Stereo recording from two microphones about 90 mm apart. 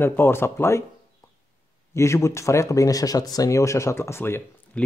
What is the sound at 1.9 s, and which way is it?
Speech, 30° left (ahead or behind).